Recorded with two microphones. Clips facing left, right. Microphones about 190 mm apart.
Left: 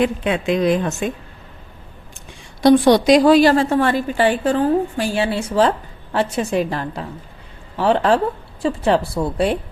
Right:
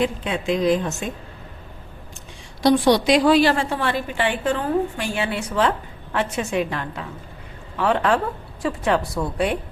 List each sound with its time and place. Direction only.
0.0 s speech: 60° left (ahead or behind)
2.6 s a woman's voice: 50° left (ahead or behind); by 9.6 s 30° left (ahead or behind)